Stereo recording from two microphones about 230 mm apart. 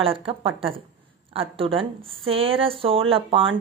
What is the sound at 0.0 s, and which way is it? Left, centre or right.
Speech, right.